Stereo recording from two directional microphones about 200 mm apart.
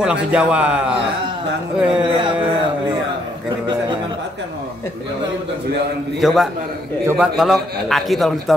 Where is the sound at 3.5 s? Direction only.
20° right (ahead or behind).